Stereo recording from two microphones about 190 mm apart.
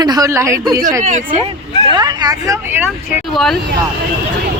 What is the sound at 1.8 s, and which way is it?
Speech, 20° right (ahead or behind).